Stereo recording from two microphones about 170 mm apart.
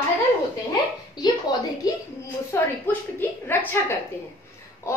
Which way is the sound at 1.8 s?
20° left (ahead or behind).